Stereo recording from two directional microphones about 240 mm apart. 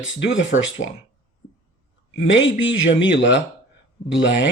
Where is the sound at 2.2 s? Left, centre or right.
Left.